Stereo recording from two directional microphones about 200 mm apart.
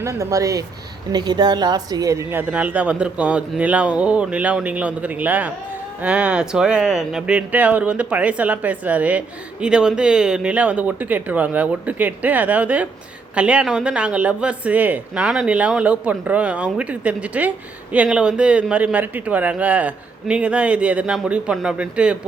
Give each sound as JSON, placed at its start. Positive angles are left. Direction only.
{"t": 0.0, "sound": "speech", "side_deg": -15}